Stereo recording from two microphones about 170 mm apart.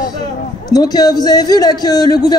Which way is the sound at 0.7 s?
20° left (ahead or behind).